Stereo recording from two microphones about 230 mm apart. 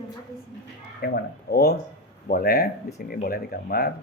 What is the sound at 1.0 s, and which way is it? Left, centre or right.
Speech, left.